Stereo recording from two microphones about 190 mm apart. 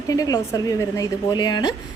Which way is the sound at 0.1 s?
20° left (ahead or behind).